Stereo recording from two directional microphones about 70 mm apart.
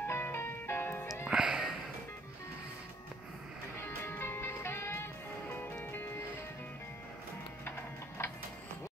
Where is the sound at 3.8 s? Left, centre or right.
Left.